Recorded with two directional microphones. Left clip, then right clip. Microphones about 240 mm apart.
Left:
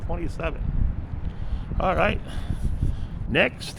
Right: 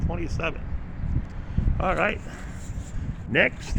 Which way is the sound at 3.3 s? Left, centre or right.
Centre.